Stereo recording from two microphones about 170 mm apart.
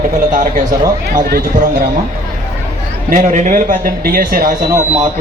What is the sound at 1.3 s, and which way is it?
Speech, 55° right (ahead or behind).